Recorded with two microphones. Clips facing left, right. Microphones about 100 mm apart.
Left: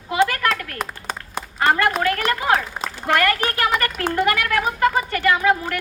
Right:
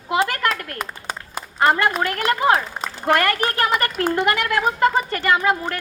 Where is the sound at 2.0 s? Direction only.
30° right (ahead or behind).